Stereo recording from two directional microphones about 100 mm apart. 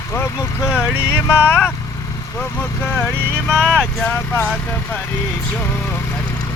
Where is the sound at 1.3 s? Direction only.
20° left (ahead or behind).